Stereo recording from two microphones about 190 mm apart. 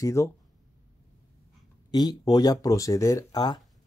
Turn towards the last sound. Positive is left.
turn(degrees=20)  # may be behind; listen again after turning